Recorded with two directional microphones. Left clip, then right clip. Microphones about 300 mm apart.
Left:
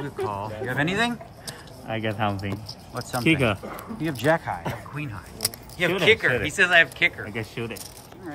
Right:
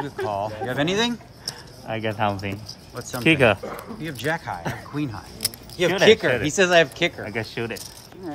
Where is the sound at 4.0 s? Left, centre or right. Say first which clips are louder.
Left 4 dB; centre.